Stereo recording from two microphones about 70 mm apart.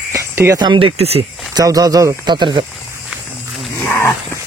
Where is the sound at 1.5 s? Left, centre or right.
Right.